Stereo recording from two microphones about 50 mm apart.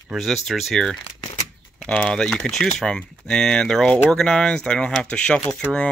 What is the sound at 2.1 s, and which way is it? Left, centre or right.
Speech, centre.